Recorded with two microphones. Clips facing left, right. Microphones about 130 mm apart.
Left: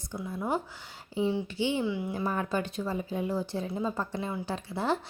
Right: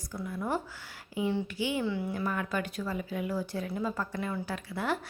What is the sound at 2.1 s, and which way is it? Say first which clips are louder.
A woman's voice: left 2 dB; 30° left (ahead or behind).